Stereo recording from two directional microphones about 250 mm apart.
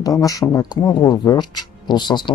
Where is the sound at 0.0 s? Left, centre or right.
Centre.